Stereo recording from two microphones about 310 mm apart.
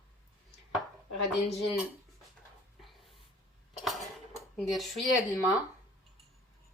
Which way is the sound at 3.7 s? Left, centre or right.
Centre.